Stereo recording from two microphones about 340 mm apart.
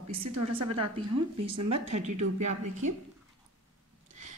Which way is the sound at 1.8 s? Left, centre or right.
Centre.